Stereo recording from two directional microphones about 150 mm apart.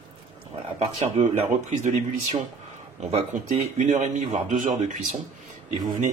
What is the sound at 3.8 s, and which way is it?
Speech, 55° right (ahead or behind).